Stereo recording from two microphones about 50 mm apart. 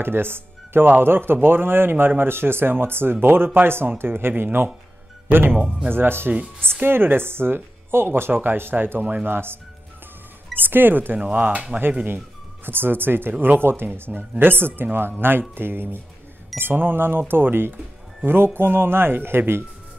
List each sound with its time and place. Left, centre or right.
0.0 s speech: right
5.6 s speech: right
5.9 s speech: right
10.6 s speech: right
12.6 s speech: right